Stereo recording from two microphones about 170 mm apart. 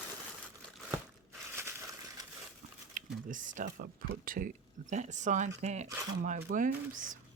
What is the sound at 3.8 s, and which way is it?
Speech, 60° right (ahead or behind).